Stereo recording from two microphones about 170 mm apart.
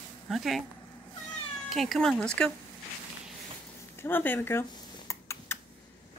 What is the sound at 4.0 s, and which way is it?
Speech, 10° left (ahead or behind).